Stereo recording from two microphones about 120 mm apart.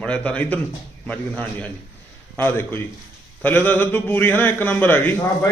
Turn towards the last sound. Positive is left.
turn(degrees=20)  # may be behind; listen again after turning